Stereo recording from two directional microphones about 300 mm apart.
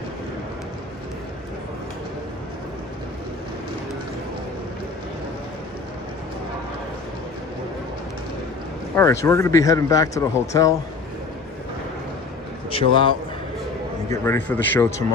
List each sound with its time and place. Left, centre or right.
9.0 s speech: centre
12.7 s speech: centre
14.1 s speech: centre